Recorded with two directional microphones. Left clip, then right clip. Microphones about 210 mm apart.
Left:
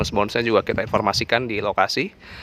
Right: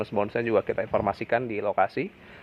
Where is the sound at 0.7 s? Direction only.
40° left (ahead or behind).